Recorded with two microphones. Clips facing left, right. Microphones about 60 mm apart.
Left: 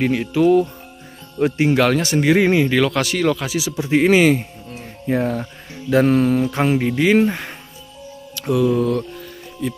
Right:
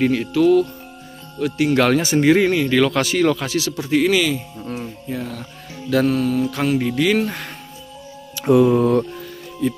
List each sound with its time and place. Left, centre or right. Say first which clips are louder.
0.0 s speech: even; centre
1.4 s speech: left 4 dB; left
1.8 s speech: right 1 dB; centre
2.4 s speech: left 1 dB; centre
2.8 s speech: right 1 dB; centre
4.1 s speech: left 5 dB; left
5.9 s mantra: left 3 dB; left
8.4 s speech: right 4 dB; right
9.6 s speech: right 4 dB; centre